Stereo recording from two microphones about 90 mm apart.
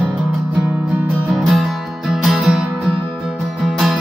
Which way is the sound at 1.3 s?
Centre (ahead or behind).